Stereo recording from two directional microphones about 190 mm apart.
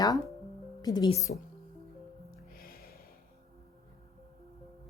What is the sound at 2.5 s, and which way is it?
Music, 50° left (ahead or behind).